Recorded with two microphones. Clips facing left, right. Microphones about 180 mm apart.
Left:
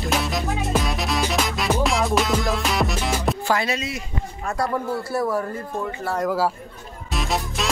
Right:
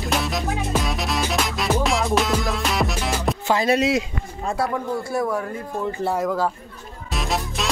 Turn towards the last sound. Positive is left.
turn(degrees=0)  # may be behind; listen again after turning